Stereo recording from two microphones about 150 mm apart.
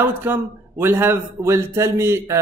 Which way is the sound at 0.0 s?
15° right (ahead or behind).